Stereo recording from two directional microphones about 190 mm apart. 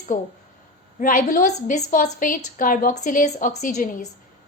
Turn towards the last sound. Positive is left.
turn(degrees=45)  # may be behind; listen again after turning